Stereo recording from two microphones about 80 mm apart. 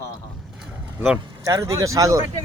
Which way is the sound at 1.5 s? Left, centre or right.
Right.